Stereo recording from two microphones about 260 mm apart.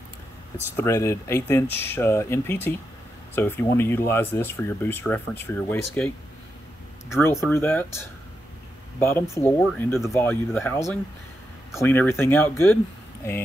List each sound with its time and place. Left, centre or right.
0.7 s speech: centre